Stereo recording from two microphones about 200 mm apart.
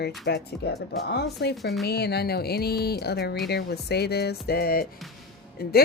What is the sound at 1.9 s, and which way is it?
Speech, 55° left (ahead or behind).